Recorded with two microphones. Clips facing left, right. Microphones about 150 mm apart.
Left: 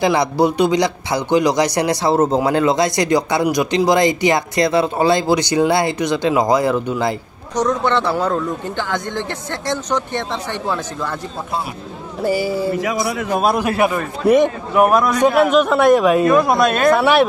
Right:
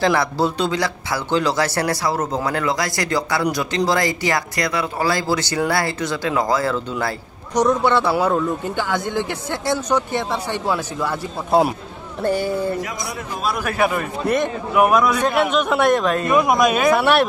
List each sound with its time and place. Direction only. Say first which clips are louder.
0.0 s speech: left 3 dB; 15° left (ahead or behind)
7.5 s speech: right 1 dB; 10° right (ahead or behind)
12.2 s a man's voice: left 2 dB; 5° left (ahead or behind)
12.7 s speech: left 7 dB; 90° left
13.6 s speech: left 4 dB; 20° left (ahead or behind)
14.2 s a man's voice: left 8 dB; 10° left (ahead or behind)
14.7 s a man's voice: right 1 dB; centre (ahead or behind)
16.3 s speech: left 2 dB; 15° right (ahead or behind)